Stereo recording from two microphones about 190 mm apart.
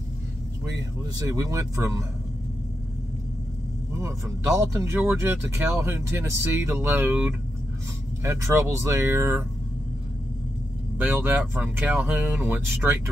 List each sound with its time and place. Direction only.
1.1 s speech: 15° right (ahead or behind)
4.0 s speech: 15° right (ahead or behind)
11.0 s speech: 10° right (ahead or behind)